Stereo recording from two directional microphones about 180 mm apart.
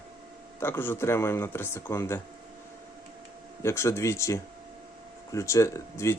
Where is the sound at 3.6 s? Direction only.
15° left (ahead or behind).